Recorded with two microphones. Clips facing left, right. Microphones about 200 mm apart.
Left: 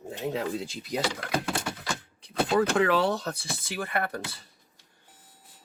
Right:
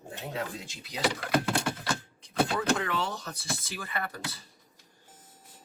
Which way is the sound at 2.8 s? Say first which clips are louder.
Left 9 dB; 65° left (ahead or behind).